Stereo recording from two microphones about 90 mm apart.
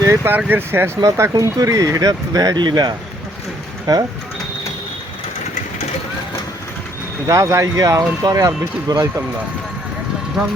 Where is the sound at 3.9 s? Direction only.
45° right (ahead or behind).